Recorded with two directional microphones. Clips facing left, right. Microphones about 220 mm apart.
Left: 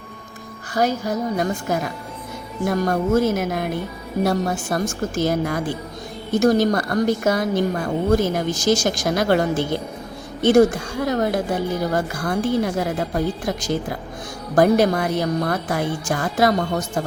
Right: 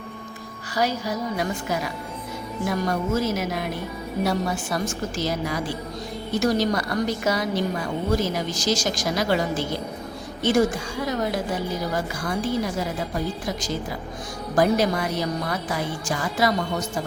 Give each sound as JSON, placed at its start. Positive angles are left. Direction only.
{"t": 0.7, "sound": "a woman's voice", "side_deg": 50}